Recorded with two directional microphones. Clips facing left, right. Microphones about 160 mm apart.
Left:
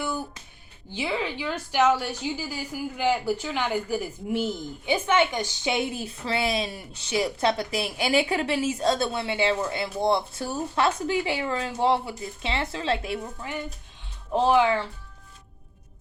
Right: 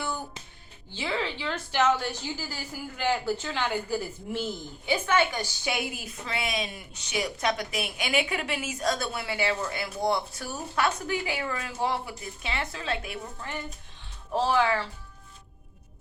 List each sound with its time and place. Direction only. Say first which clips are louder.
0.9 s a woman's voice: left 2 dB; 15° left (ahead or behind); by 13.1 s 30° left (ahead or behind)
13.5 s a woman's voice: left 3 dB; 15° left (ahead or behind)